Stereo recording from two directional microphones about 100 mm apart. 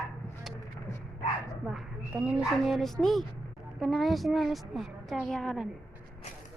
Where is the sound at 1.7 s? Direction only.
Centre (ahead or behind).